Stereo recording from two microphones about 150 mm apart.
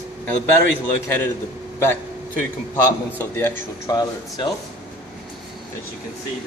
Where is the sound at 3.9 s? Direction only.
25° left (ahead or behind).